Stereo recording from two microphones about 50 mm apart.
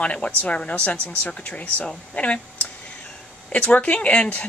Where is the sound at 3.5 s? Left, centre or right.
Left.